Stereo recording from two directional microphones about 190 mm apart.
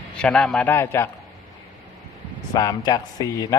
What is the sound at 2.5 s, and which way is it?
Speech, 20° left (ahead or behind).